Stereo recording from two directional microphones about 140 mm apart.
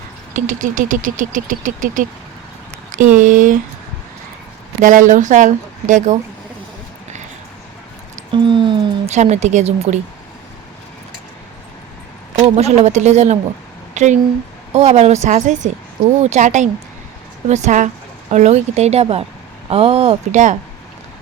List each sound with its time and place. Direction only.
0.3 s vehicle: 65° right (ahead or behind)
4.8 s speech: 65° right (ahead or behind)
8.3 s a sound: 35° right (ahead or behind)
9.0 s speech: 55° right (ahead or behind)
12.4 s speech: 50° right (ahead or behind)